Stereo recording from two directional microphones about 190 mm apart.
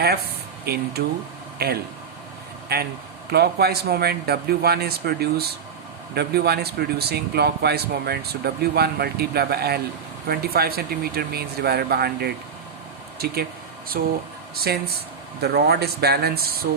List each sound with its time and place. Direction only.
0.6 s speech: 55° right (ahead or behind)